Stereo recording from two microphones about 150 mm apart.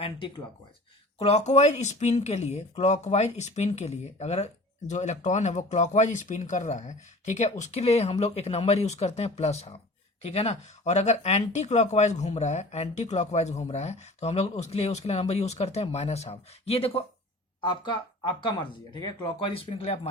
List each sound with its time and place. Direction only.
1.2 s speech: 45° left (ahead or behind)
17.6 s speech: 30° left (ahead or behind)
19.7 s speech: 40° left (ahead or behind)